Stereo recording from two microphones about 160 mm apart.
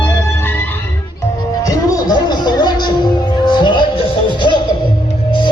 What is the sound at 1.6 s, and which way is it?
Music, 20° left (ahead or behind).